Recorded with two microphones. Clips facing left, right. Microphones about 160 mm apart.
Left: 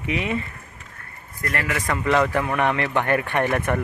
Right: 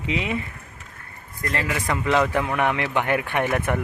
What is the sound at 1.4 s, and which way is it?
Speech, 20° right (ahead or behind).